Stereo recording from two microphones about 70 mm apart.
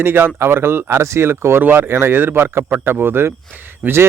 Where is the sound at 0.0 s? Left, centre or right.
Right.